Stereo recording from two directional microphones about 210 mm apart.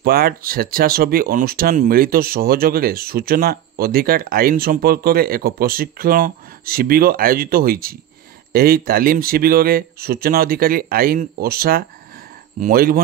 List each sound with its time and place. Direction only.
0.0 s speech: 45° right (ahead or behind)